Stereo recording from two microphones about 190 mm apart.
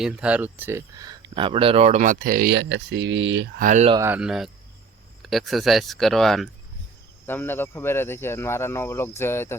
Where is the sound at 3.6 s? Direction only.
40° right (ahead or behind).